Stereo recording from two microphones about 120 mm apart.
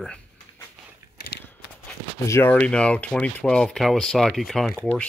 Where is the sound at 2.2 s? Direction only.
25° left (ahead or behind).